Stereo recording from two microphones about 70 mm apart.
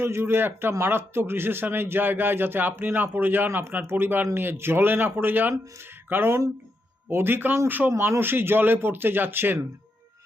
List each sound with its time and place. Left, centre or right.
0.0 s a man's voice: right